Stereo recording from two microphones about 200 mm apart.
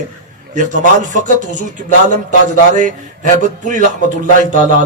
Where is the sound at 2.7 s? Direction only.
40° right (ahead or behind).